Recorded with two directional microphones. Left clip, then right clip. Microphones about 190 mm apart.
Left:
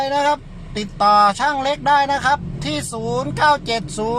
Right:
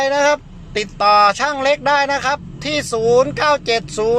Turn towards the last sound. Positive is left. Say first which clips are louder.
# right 5 dB
turn(degrees=-15)  # may be behind; listen again after turning